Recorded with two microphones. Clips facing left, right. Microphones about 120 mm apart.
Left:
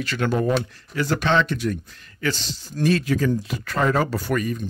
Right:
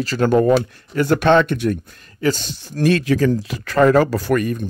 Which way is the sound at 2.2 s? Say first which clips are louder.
Right 6 dB; 45° right (ahead or behind).